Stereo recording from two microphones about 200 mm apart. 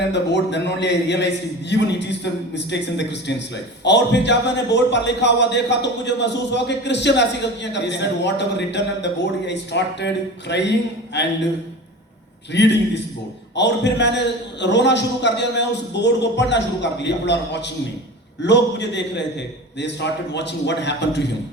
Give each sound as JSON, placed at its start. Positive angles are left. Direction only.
{"t": 0.1, "sound": "a man's voice", "side_deg": 60}
{"t": 12.5, "sound": "a man's voice", "side_deg": 60}